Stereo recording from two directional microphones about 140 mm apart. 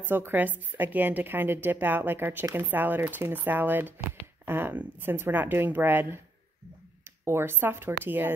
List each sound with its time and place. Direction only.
0.0 s a woman's voice: 15° right (ahead or behind)
7.2 s a woman's voice: 15° right (ahead or behind)